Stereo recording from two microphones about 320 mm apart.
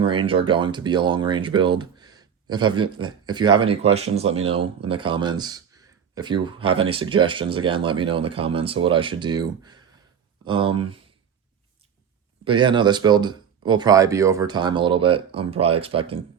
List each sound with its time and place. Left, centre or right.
0.0 s speech: centre
12.5 s speech: centre